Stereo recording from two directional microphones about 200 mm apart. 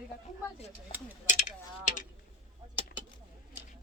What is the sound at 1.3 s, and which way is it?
Mechanisms, 40° left (ahead or behind).